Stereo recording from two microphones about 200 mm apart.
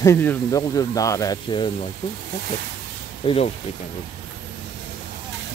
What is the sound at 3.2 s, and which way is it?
Speech, 25° left (ahead or behind).